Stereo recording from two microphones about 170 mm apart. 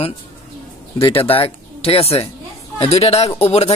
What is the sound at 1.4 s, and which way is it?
Speech, 35° left (ahead or behind).